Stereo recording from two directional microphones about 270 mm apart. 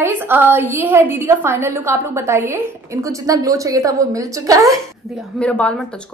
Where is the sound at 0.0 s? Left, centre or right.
Centre.